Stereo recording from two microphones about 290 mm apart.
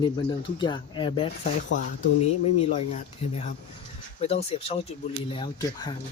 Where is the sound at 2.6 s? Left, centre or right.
Left.